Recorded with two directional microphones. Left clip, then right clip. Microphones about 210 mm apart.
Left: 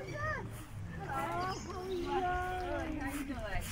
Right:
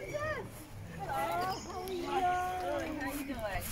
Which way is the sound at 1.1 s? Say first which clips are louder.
Right 3 dB; 55° right (ahead or behind).